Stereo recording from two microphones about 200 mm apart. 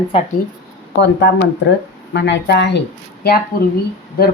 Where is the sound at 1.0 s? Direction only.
60° left (ahead or behind).